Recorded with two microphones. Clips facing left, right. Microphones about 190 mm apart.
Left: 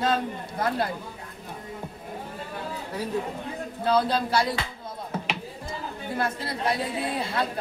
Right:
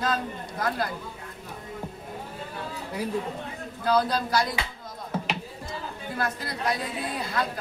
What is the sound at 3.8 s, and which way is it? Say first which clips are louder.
Speech: left 1 dB; 25° left (ahead or behind).